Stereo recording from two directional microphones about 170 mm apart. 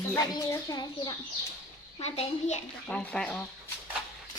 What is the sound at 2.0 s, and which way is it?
Speech, 40° left (ahead or behind).